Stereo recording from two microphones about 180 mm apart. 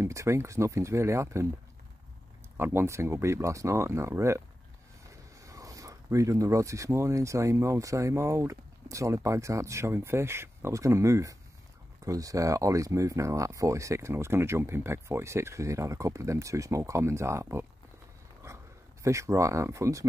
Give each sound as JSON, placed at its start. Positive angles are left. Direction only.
{"t": 0.0, "sound": "speech", "side_deg": -15}
{"t": 2.5, "sound": "speech", "side_deg": -15}
{"t": 5.4, "sound": "speech", "side_deg": -20}
{"t": 19.0, "sound": "speech", "side_deg": -15}